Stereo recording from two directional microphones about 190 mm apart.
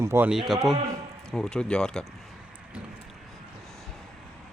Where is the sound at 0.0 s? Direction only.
10° right (ahead or behind); by 2.0 s 5° left (ahead or behind).